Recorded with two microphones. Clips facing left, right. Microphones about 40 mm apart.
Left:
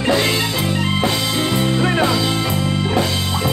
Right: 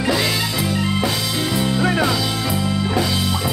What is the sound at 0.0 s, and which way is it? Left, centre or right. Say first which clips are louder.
Music: left 3 dB; left.